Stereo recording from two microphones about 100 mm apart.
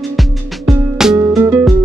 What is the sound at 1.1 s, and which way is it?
Music, 25° right (ahead or behind).